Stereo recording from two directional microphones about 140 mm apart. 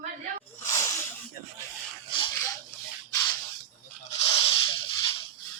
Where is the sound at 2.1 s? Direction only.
35° left (ahead or behind).